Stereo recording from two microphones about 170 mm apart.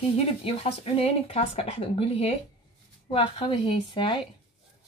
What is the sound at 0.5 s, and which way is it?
Speech, 35° left (ahead or behind).